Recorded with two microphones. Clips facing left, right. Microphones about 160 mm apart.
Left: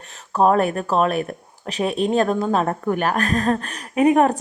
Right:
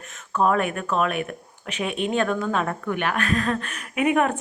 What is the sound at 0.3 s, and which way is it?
Speech, 35° left (ahead or behind).